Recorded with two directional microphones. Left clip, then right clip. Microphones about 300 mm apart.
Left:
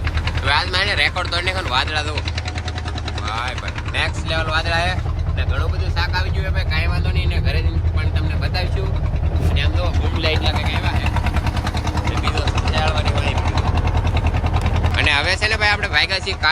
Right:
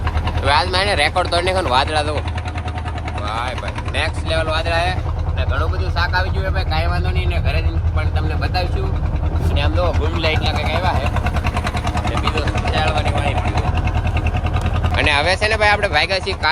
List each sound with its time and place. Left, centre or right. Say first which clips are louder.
0.4 s speech: right 2 dB; centre
3.2 s speech: right 1 dB; centre
9.6 s speech: right 6 dB; centre
12.2 s speech: right 2 dB; centre
14.9 s speech: right 2 dB; centre